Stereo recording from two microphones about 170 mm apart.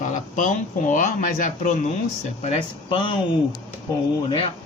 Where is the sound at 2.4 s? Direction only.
35° left (ahead or behind).